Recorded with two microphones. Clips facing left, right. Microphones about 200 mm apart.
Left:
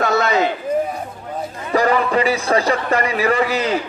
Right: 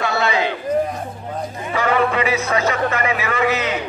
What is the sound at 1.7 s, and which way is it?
A man's voice, 40° left (ahead or behind).